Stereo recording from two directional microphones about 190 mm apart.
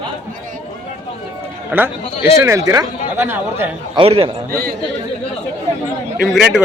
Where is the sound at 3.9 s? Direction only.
30° right (ahead or behind).